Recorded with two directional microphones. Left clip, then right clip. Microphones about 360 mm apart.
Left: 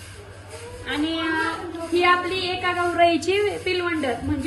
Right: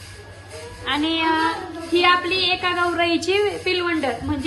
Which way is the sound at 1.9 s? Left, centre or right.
Centre.